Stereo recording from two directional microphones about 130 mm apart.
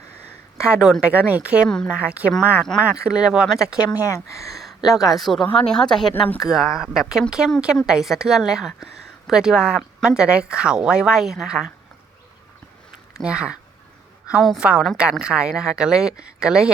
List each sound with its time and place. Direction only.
0.6 s speech: 5° right (ahead or behind)
4.0 s speech: 25° left (ahead or behind)
5.0 s a woman's voice: centre (ahead or behind)
6.4 s a woman's voice: centre (ahead or behind)
13.1 s a woman's voice: 5° right (ahead or behind)